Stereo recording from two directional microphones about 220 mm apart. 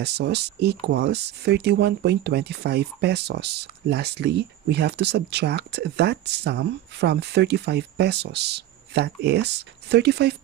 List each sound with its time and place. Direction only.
0.0 s speech: 50° right (ahead or behind)